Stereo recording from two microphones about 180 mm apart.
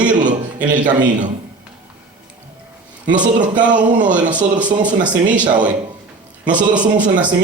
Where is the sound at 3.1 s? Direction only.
45° right (ahead or behind).